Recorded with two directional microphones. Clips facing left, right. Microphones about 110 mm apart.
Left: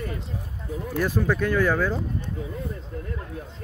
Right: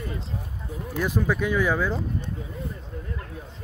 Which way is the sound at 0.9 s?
15° right (ahead or behind).